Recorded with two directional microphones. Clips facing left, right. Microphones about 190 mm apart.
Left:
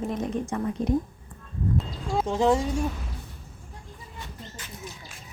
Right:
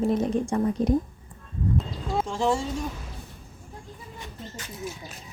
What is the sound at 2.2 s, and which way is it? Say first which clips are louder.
Speech: left 3 dB; 20° left (ahead or behind).